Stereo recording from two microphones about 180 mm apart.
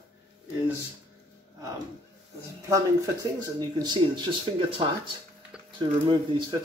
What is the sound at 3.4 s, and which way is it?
Speech, 25° right (ahead or behind).